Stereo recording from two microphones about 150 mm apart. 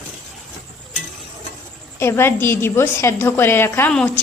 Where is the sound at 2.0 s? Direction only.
15° left (ahead or behind).